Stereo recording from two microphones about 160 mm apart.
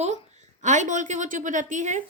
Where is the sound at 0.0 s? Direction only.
45° right (ahead or behind).